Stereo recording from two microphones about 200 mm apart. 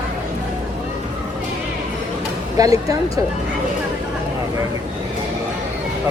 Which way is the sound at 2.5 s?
15° right (ahead or behind).